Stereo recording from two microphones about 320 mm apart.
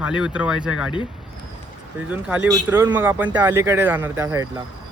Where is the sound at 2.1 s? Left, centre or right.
Centre.